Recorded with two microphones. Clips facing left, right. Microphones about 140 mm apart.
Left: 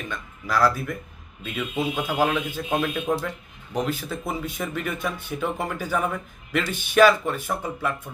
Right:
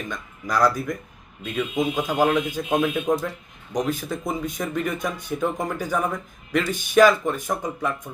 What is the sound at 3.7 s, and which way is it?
Speech, 15° right (ahead or behind).